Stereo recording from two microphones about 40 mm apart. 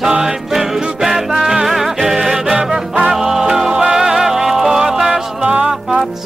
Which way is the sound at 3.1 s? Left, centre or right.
Centre.